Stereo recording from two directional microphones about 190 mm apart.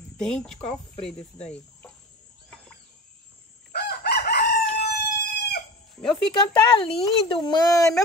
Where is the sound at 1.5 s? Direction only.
5° left (ahead or behind).